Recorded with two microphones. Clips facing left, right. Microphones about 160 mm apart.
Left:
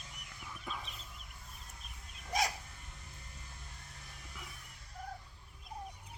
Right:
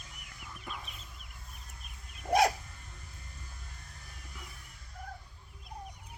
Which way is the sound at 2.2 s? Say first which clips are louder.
Right 9 dB; 60° right (ahead or behind).